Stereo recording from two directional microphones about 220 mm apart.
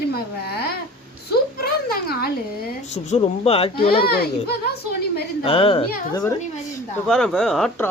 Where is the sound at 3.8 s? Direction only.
45° left (ahead or behind).